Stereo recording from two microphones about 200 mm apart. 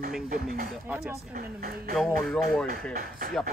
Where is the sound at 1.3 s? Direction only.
50° right (ahead or behind).